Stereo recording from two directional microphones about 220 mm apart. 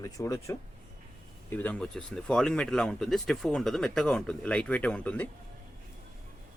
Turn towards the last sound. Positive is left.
turn(degrees=5)  # may be behind; listen again after turning